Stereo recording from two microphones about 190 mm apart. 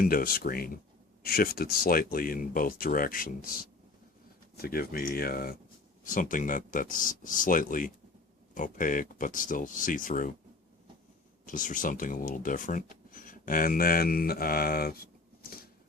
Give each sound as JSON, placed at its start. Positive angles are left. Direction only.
{"t": 0.0, "sound": "speech", "side_deg": 50}
{"t": 11.4, "sound": "speech", "side_deg": 45}